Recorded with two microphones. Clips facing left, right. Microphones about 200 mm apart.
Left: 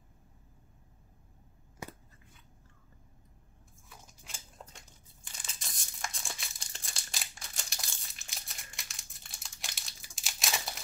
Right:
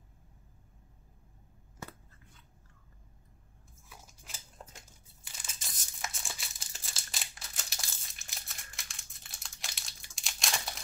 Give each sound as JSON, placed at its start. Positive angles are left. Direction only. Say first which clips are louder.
{"t": 1.8, "sound": "scissors", "louder": "left 2 dB", "side_deg": 15}
{"t": 4.3, "sound": "a sound", "louder": "left 1 dB", "side_deg": -5}
{"t": 5.2, "sound": "crumpling", "louder": "left 1 dB", "side_deg": -5}